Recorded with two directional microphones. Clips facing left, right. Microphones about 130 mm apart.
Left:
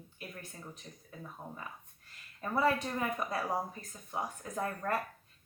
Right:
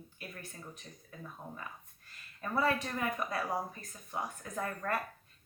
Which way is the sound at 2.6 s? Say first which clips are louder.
Left 2 dB; 20° left (ahead or behind).